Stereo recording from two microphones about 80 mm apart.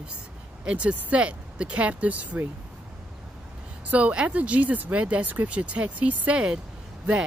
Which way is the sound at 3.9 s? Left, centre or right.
Centre.